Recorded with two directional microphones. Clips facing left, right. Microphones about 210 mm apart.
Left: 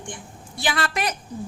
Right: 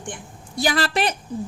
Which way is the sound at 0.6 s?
35° right (ahead or behind).